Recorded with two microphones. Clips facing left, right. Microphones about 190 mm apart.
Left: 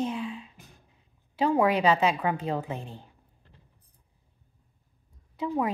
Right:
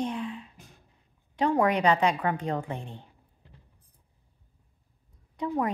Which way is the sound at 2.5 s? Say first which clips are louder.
Even; 5° left (ahead or behind).